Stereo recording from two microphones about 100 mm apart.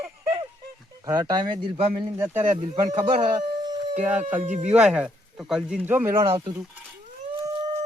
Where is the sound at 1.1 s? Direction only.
45° right (ahead or behind).